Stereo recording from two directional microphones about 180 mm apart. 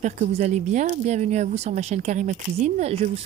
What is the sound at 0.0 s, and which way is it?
Speech, 40° right (ahead or behind).